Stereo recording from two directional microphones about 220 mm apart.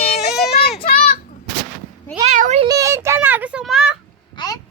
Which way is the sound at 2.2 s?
35° right (ahead or behind).